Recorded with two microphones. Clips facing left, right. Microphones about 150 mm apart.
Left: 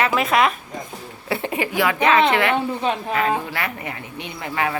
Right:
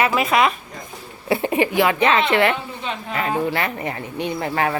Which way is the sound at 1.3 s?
20° right (ahead or behind).